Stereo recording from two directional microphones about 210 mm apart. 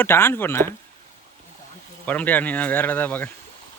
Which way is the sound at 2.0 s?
5° left (ahead or behind).